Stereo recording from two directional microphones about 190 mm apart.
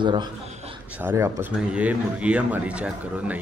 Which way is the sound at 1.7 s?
5° right (ahead or behind).